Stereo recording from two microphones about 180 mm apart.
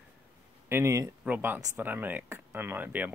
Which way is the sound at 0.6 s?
15° right (ahead or behind).